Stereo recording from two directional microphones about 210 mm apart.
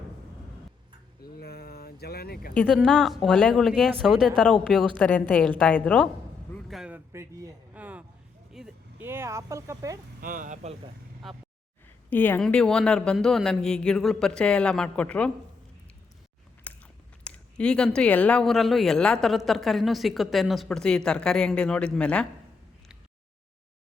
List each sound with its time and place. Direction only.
1.4 s a sound: 50° left (ahead or behind)
2.6 s speech: centre (ahead or behind)
6.5 s a sound: centre (ahead or behind)
8.5 s speech: 5° right (ahead or behind)
10.2 s speech: 40° right (ahead or behind)
12.1 s speech: 10° left (ahead or behind)
16.7 s biting: 5° left (ahead or behind)
17.2 s speech: 5° left (ahead or behind)